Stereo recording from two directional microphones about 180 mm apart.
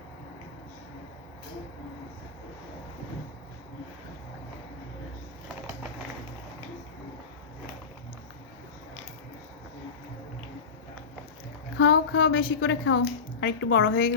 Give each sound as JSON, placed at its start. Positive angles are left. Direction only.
{"t": 11.8, "sound": "a woman's voice", "side_deg": 75}